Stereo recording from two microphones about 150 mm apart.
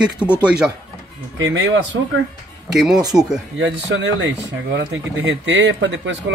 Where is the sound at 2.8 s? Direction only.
5° right (ahead or behind).